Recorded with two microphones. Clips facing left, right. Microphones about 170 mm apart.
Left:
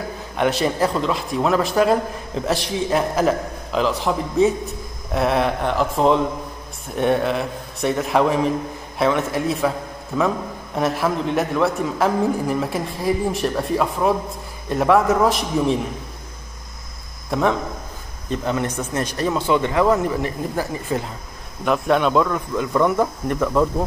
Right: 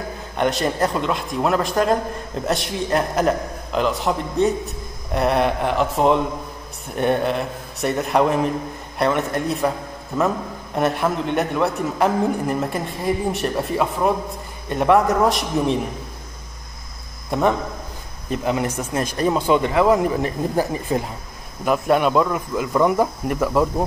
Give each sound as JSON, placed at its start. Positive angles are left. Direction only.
{"t": 0.4, "sound": "a man's voice", "side_deg": 0}
{"t": 17.3, "sound": "speech", "side_deg": 0}
{"t": 21.6, "sound": "a man's voice", "side_deg": -5}